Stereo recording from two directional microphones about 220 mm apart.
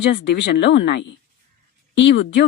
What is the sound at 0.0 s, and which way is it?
Speech, 50° left (ahead or behind).